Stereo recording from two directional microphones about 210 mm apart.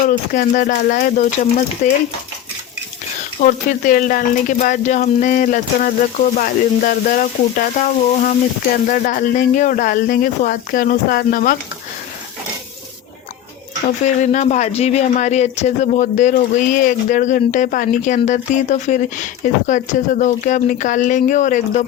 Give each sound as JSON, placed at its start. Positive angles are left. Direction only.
{"t": 0.0, "sound": "speech", "side_deg": 40}
{"t": 3.4, "sound": "speech", "side_deg": 40}
{"t": 14.0, "sound": "speech", "side_deg": 35}